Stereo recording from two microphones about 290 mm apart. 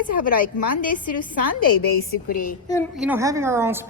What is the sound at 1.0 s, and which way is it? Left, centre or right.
Speech, left.